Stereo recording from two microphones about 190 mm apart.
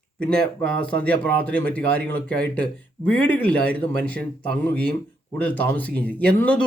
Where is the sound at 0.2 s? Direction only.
5° left (ahead or behind).